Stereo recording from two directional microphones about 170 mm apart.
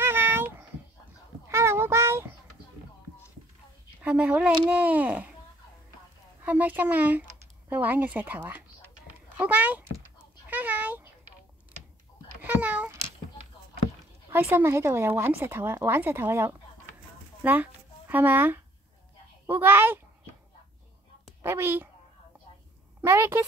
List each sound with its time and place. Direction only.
0.0 s a sound: 15° right (ahead or behind)
4.0 s speech: 10° right (ahead or behind)
6.4 s speech: 10° right (ahead or behind)
9.9 s a sound: 10° right (ahead or behind)
12.4 s speech: 10° right (ahead or behind)
14.3 s speech: 10° right (ahead or behind)
21.4 s a woman's voice: 15° right (ahead or behind)
23.0 s speech: 15° right (ahead or behind)